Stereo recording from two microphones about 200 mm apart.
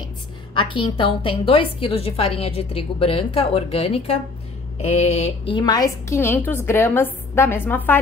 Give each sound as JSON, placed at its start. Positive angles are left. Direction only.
{"t": 0.6, "sound": "a woman's voice", "side_deg": 25}